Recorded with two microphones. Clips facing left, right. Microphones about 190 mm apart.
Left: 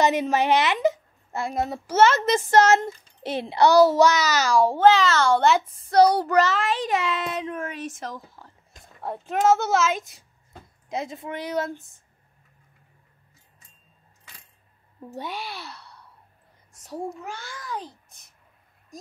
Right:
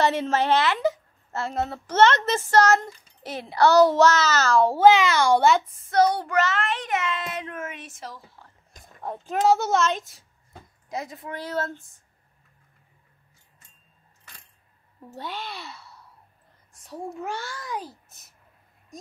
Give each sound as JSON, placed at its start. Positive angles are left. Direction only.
{"t": 0.0, "sound": "a woman's voice", "side_deg": 15}
{"t": 2.6, "sound": "a child's voice", "side_deg": 25}
{"t": 3.6, "sound": "a child's voice", "side_deg": 10}
{"t": 4.7, "sound": "a child's voice", "side_deg": -15}
{"t": 5.8, "sound": "child singing", "side_deg": 35}
{"t": 7.1, "sound": "a child's voice", "side_deg": 0}
{"t": 7.6, "sound": "child singing", "side_deg": 35}
{"t": 8.7, "sound": "speech", "side_deg": 0}
{"t": 9.9, "sound": "a child's voice", "side_deg": 20}
{"t": 15.1, "sound": "a child's voice", "side_deg": 15}
{"t": 15.4, "sound": "a child's voice", "side_deg": 0}